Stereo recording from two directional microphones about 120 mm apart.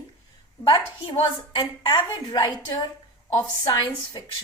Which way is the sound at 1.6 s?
40° left (ahead or behind).